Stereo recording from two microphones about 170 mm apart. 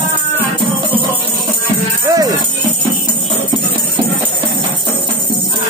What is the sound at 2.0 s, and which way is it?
Music, 20° right (ahead or behind).